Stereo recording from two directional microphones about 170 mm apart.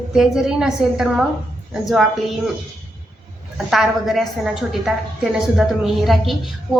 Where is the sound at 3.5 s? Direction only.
Centre (ahead or behind).